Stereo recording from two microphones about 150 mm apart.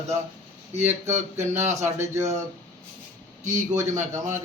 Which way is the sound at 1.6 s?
20° right (ahead or behind).